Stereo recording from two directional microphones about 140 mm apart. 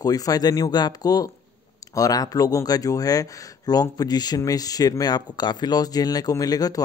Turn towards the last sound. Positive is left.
turn(degrees=25)  # may be behind; listen again after turning